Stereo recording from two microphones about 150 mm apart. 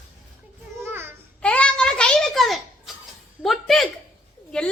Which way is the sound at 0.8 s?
15° right (ahead or behind).